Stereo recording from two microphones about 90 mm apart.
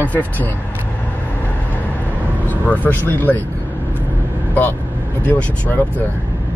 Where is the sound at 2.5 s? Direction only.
20° left (ahead or behind).